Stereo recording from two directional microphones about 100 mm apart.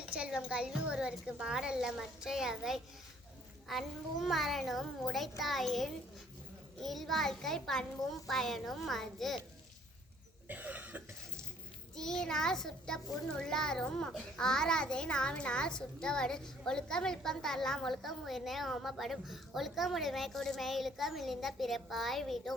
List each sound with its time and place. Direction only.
0.2 s a woman's voice: 10° right (ahead or behind)
10.5 s cough: 15° right (ahead or behind)
11.9 s a child's voice: 5° left (ahead or behind)